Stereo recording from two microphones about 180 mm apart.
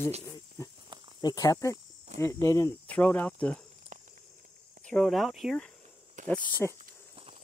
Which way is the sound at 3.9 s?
45° right (ahead or behind).